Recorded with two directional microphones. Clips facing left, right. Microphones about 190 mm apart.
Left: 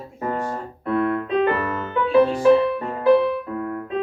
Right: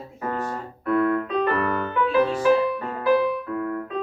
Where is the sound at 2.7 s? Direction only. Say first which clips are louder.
Left 4 dB; 25° left (ahead or behind).